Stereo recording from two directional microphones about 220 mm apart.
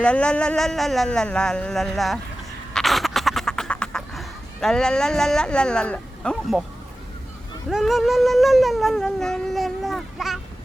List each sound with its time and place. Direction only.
0.0 s cat: 5° left (ahead or behind)
2.7 s duck: centre (ahead or behind)
7.7 s cat: centre (ahead or behind)